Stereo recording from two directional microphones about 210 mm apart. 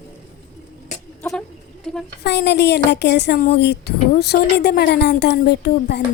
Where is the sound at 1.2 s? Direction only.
10° left (ahead or behind).